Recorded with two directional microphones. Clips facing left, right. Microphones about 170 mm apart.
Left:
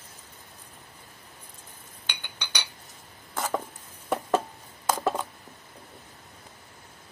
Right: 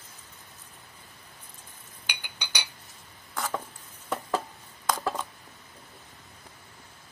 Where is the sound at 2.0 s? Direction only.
10° right (ahead or behind).